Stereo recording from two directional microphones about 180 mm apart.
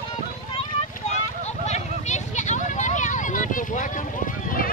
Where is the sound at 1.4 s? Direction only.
40° left (ahead or behind).